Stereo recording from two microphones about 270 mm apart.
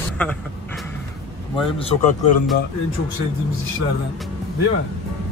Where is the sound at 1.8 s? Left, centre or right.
Left.